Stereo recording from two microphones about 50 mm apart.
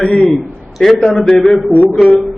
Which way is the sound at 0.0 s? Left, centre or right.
Left.